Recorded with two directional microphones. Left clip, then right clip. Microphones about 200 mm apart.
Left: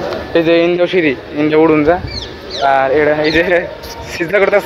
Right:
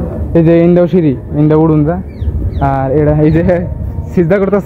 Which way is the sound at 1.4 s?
10° right (ahead or behind).